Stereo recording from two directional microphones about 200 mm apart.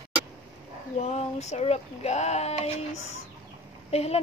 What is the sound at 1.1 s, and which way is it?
Speech, 35° left (ahead or behind).